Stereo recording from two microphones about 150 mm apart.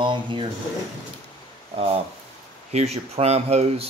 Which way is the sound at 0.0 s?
35° right (ahead or behind).